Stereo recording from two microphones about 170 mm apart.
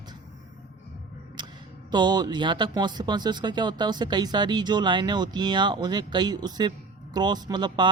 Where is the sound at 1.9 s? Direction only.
25° right (ahead or behind).